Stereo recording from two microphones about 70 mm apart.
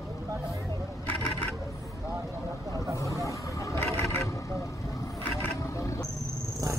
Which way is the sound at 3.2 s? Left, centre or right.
Left.